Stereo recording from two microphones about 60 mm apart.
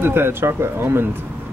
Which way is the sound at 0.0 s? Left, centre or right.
Right.